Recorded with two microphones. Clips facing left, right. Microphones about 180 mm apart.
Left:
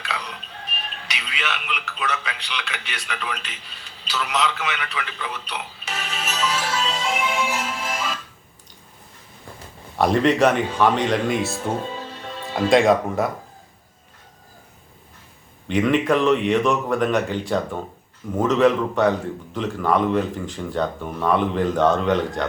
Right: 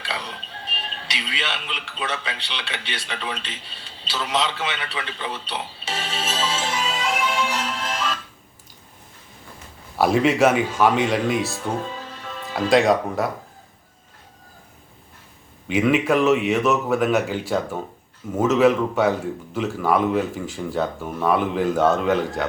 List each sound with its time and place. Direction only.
0.0 s speech: 30° right (ahead or behind)
6.8 s music: centre (ahead or behind)
10.0 s speech: 5° right (ahead or behind)
15.6 s speech: 5° right (ahead or behind)